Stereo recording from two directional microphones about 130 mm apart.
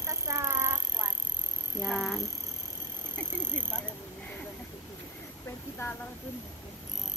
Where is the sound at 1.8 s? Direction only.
Centre (ahead or behind).